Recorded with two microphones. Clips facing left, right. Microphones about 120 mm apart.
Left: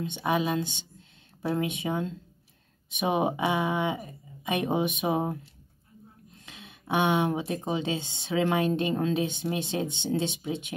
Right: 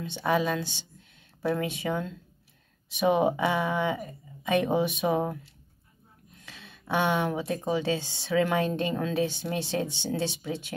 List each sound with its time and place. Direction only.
0.0 s speech: 20° left (ahead or behind)
6.4 s speech: 20° left (ahead or behind)